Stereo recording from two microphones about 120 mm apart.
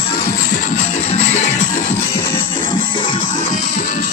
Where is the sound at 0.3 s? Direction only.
90° left.